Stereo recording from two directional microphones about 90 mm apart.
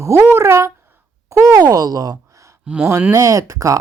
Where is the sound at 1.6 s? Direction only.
45° right (ahead or behind).